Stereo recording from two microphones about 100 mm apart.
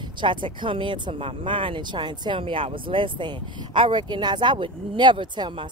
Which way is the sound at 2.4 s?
65° right (ahead or behind).